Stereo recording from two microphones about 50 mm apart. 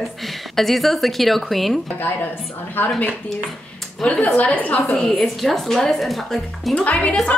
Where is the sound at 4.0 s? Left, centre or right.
Left.